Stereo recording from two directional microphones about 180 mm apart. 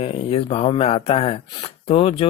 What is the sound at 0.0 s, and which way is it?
Speech, 30° left (ahead or behind).